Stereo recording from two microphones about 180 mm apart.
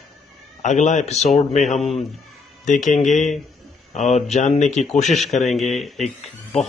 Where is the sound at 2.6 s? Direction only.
45° left (ahead or behind).